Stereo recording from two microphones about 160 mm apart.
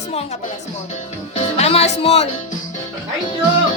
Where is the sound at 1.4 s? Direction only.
40° left (ahead or behind).